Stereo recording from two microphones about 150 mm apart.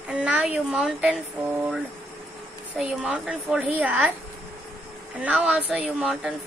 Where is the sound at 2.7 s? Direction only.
10° right (ahead or behind).